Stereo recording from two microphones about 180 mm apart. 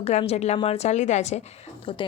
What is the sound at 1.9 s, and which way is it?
Speech, 30° left (ahead or behind).